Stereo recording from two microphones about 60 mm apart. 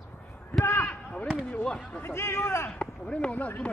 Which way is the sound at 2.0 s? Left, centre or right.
Left.